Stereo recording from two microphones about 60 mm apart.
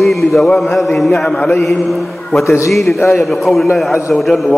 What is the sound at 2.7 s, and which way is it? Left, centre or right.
Speech, centre.